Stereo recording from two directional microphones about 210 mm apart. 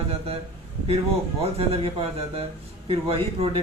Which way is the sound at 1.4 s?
30° right (ahead or behind).